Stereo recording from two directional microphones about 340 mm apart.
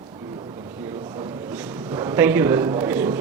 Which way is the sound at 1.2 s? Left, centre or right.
Centre.